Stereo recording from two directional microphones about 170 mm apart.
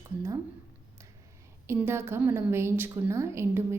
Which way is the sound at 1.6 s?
15° right (ahead or behind).